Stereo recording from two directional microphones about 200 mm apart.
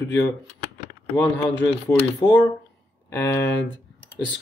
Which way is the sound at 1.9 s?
15° left (ahead or behind).